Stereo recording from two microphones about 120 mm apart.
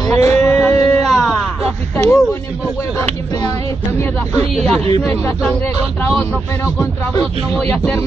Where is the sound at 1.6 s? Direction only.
20° left (ahead or behind).